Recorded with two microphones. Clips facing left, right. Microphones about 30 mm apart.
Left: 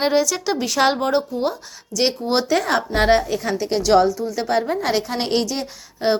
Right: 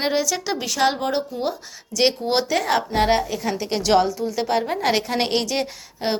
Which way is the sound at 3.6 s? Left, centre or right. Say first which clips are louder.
Left 3 dB; centre.